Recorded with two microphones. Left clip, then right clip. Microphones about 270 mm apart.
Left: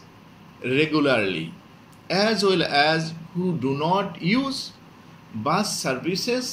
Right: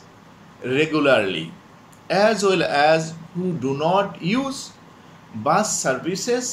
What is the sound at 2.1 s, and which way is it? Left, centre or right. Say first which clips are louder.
Speech: right 3 dB; right.